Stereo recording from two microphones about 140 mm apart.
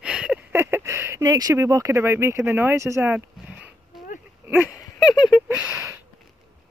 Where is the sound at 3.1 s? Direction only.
10° right (ahead or behind).